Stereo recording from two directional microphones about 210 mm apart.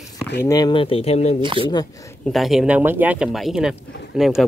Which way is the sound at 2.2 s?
Centre (ahead or behind).